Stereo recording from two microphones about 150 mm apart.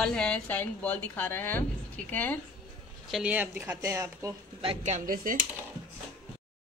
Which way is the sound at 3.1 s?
5° right (ahead or behind).